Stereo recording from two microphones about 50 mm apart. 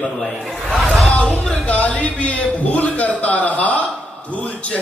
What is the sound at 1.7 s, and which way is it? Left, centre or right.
A man's voice, left.